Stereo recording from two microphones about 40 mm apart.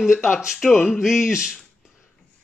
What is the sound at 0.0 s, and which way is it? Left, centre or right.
Speech, centre.